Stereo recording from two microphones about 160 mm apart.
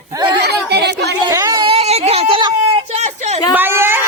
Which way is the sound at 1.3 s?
20° right (ahead or behind).